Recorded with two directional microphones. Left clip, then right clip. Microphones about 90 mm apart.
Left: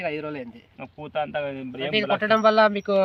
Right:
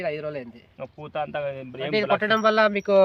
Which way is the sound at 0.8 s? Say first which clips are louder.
Left 1 dB; 45° right (ahead or behind).